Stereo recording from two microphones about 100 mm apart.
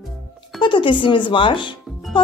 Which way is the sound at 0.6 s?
55° left (ahead or behind).